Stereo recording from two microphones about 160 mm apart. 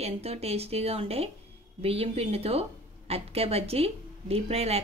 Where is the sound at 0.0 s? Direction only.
40° right (ahead or behind).